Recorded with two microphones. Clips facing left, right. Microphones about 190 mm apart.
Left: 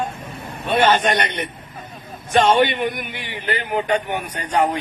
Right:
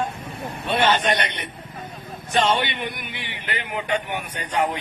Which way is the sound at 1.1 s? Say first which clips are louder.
Left 3 dB; 50° left (ahead or behind).